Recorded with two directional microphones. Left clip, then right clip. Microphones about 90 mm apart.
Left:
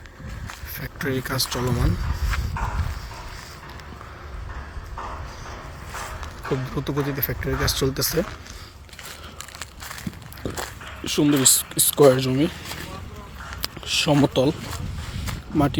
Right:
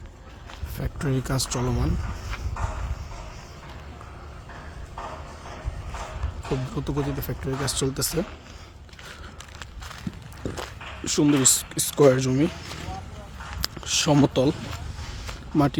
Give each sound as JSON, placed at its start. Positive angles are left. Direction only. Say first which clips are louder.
{"t": 0.8, "sound": "speech", "louder": "left 3 dB", "side_deg": -5}
{"t": 1.7, "sound": "speech", "louder": "left 2 dB", "side_deg": -15}
{"t": 6.4, "sound": "speech", "louder": "left 3 dB", "side_deg": -5}
{"t": 10.4, "sound": "dog", "louder": "left 2 dB", "side_deg": -15}
{"t": 11.0, "sound": "speech", "louder": "left 1 dB", "side_deg": -25}
{"t": 13.6, "sound": "a sound", "louder": "left 2 dB", "side_deg": -35}
{"t": 15.5, "sound": "speech", "louder": "left 1 dB", "side_deg": -25}